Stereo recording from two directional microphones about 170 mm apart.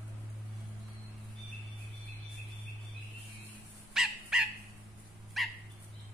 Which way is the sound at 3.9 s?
5° right (ahead or behind).